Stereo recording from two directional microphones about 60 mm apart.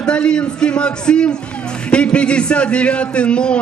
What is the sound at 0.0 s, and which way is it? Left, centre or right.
A man's voice, centre.